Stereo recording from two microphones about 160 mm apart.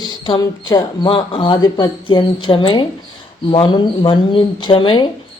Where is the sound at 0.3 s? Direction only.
25° left (ahead or behind).